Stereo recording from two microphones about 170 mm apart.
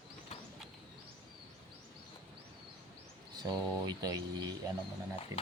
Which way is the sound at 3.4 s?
25° right (ahead or behind).